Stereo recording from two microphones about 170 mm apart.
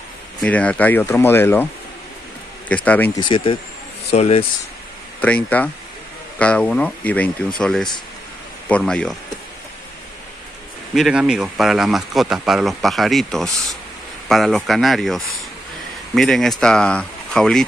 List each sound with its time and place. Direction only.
0.4 s speech: 5° left (ahead or behind)
2.7 s speech: 10° left (ahead or behind)
3.2 s speech: 30° left (ahead or behind)
5.2 s speech: 10° left (ahead or behind)
11.0 s speech: 5° right (ahead or behind)